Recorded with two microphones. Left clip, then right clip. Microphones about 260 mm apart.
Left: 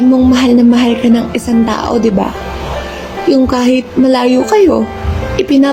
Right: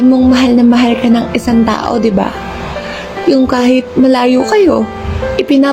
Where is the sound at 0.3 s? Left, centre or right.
Right.